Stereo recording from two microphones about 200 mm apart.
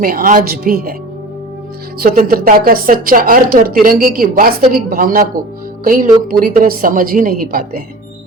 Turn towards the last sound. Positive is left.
turn(degrees=-45)  # may be behind; listen again after turning